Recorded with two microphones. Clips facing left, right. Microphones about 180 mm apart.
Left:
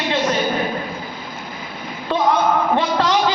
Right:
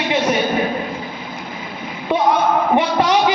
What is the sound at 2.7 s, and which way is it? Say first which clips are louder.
Speech: right 2 dB; 15° right (ahead or behind).